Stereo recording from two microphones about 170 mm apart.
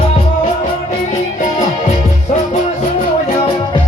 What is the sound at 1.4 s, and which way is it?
Music, 45° left (ahead or behind).